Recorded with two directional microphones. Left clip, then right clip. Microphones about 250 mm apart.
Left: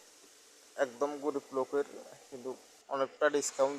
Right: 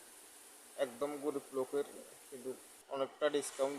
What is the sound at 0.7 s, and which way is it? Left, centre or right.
A man's voice, centre.